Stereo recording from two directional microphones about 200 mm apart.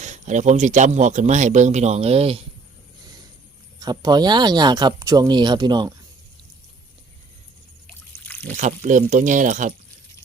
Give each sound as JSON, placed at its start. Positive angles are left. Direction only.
{"t": 0.0, "sound": "speech", "side_deg": -35}
{"t": 3.8, "sound": "speech", "side_deg": -20}
{"t": 7.9, "sound": "trickle", "side_deg": 10}
{"t": 8.4, "sound": "speech", "side_deg": -35}